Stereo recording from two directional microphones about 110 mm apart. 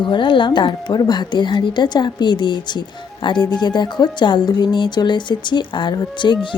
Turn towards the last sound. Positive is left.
turn(degrees=45)  # may be behind; listen again after turning